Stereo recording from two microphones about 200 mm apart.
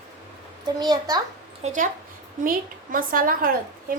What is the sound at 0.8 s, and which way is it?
Speech, 20° right (ahead or behind).